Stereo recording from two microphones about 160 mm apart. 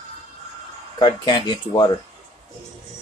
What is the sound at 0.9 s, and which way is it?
Speech, 25° left (ahead or behind).